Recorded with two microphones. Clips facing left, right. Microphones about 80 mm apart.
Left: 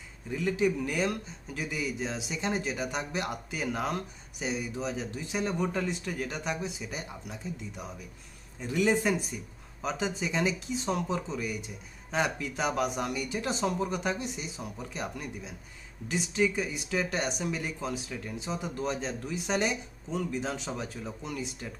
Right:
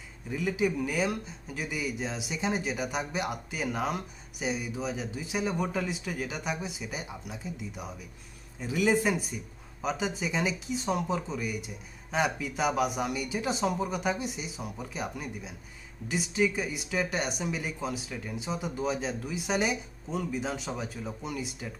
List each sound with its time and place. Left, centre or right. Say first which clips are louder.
0.3 s speech: left 1 dB; centre